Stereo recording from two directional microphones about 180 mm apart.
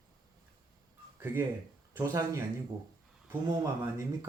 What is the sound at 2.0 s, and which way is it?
Speech, 15° right (ahead or behind).